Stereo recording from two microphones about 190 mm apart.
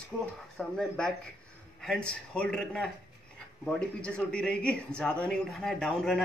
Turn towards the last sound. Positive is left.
turn(degrees=5)  # may be behind; listen again after turning